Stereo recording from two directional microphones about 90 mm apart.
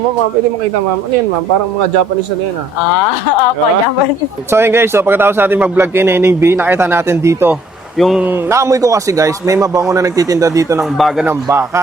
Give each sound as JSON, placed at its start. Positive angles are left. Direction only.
{"t": 4.5, "sound": "a man's voice", "side_deg": -25}
{"t": 7.9, "sound": "speech", "side_deg": 0}
{"t": 8.2, "sound": "a man's voice", "side_deg": -25}
{"t": 10.9, "sound": "speech", "side_deg": 0}
{"t": 11.4, "sound": "a man's voice", "side_deg": -30}